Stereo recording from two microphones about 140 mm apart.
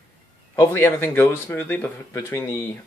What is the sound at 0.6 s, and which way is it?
Speech, 15° left (ahead or behind).